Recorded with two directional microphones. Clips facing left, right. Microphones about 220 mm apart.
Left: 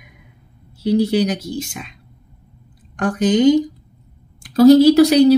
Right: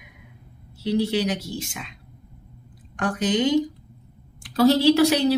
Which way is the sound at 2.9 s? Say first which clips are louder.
Left 7 dB; 45° left (ahead or behind).